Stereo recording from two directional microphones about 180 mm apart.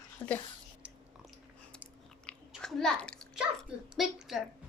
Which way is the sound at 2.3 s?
Centre (ahead or behind).